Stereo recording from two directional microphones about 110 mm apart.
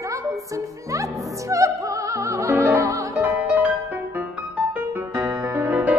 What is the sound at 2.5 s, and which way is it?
Music, 20° right (ahead or behind).